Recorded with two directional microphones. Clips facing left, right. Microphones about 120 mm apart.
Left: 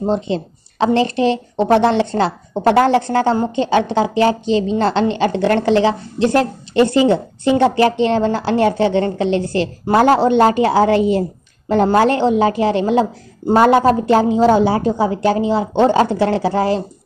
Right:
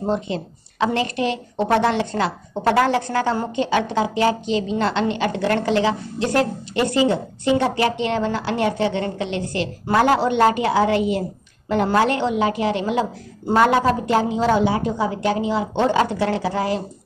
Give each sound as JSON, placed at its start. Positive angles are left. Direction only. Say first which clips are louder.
{"t": 0.0, "sound": "a woman's voice", "louder": "left 5 dB", "side_deg": 25}